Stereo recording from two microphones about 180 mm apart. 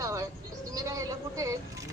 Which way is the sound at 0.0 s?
20° right (ahead or behind).